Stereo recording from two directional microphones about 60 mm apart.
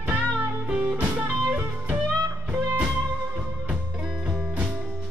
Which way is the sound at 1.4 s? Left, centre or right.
Right.